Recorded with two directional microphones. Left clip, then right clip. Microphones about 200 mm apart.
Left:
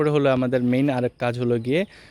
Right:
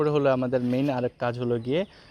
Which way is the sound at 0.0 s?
40° left (ahead or behind).